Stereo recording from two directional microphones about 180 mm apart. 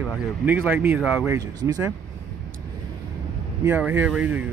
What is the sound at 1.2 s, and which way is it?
Speech, 20° right (ahead or behind).